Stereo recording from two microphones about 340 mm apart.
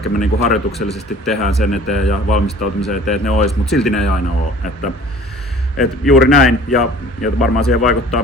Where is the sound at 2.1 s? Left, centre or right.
Left.